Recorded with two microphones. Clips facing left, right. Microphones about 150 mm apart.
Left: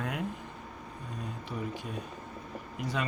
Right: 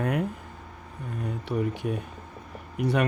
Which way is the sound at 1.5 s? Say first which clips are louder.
Right 10 dB; 65° right (ahead or behind).